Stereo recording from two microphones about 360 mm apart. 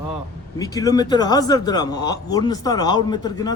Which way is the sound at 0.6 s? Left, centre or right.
Centre.